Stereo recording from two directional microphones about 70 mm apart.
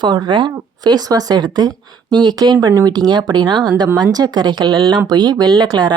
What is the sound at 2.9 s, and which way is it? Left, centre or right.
Speech, right.